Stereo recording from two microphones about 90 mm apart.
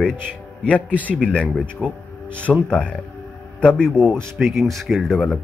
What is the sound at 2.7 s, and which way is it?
Speech, 10° left (ahead or behind).